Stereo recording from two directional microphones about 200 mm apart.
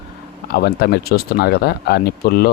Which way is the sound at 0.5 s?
50° left (ahead or behind).